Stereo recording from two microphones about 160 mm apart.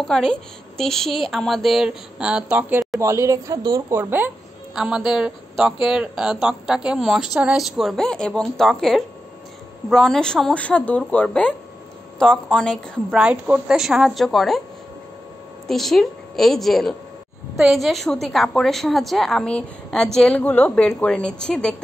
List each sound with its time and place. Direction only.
0.0 s speech: 5° left (ahead or behind); by 4.3 s 15° right (ahead or behind)
4.7 s speech: 5° right (ahead or behind)
13.2 s speech: 5° right (ahead or behind)
15.6 s speech: centre (ahead or behind)